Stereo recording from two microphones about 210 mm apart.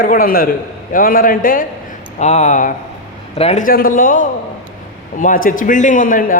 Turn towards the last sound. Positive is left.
turn(degrees=40)  # may be behind; listen again after turning